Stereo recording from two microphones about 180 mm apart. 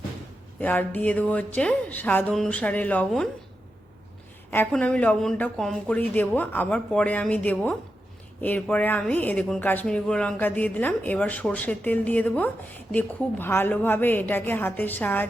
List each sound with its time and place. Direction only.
0.6 s speech: 10° left (ahead or behind)
4.5 s speech: 10° left (ahead or behind)